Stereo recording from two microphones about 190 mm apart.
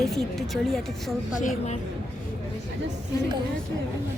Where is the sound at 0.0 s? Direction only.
Centre (ahead or behind).